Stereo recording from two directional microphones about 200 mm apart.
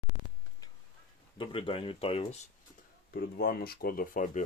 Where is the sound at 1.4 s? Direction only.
25° left (ahead or behind).